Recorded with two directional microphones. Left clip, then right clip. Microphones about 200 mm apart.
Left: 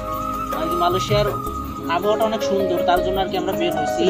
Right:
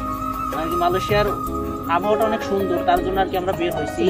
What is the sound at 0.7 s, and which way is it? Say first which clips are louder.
Speech: even; 15° left (ahead or behind).